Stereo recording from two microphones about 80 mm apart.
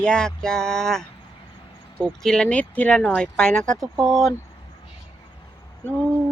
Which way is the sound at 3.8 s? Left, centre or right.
Right.